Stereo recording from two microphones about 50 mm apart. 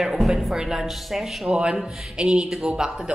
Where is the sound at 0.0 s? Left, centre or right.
Centre.